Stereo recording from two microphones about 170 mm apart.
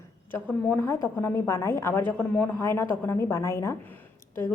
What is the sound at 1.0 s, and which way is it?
A woman's voice, 15° left (ahead or behind).